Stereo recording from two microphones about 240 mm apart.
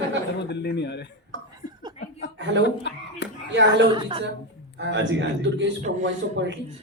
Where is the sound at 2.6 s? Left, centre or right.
Left.